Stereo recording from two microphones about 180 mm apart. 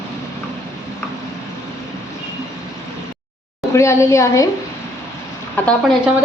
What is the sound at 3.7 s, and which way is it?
Speech, 15° left (ahead or behind).